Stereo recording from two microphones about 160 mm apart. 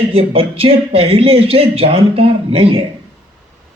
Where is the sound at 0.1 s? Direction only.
35° right (ahead or behind).